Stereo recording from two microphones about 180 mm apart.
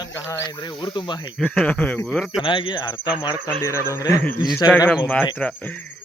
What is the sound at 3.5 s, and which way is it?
Speech, 15° left (ahead or behind).